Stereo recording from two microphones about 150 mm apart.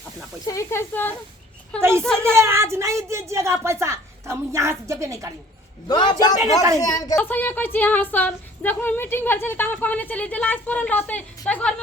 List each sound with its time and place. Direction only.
0.4 s female singing: 20° left (ahead or behind)
1.8 s a woman's voice: 15° right (ahead or behind)
5.9 s a man's voice: 30° left (ahead or behind)
6.4 s a woman's voice: 20° right (ahead or behind)
6.7 s a man's voice: 25° left (ahead or behind)
7.2 s female singing: 10° left (ahead or behind)